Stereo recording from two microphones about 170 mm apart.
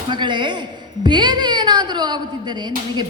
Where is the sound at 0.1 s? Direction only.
25° right (ahead or behind).